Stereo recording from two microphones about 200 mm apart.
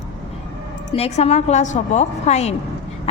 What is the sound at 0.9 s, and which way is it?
A woman's voice, 30° left (ahead or behind).